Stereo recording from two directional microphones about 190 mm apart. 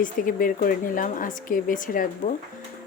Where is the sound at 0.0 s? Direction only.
45° left (ahead or behind).